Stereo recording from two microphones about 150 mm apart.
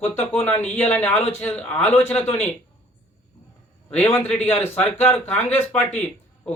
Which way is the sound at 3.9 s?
10° left (ahead or behind).